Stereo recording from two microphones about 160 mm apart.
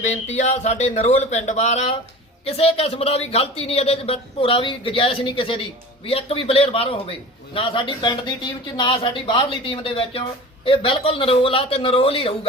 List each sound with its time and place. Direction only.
0.0 s speech: 45° left (ahead or behind)